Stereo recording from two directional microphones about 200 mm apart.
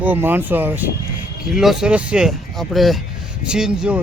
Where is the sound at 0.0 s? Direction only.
10° right (ahead or behind).